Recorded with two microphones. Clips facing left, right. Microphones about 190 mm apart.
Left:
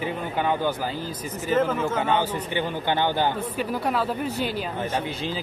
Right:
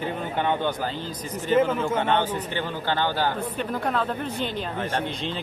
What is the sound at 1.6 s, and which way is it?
Speech, 10° right (ahead or behind).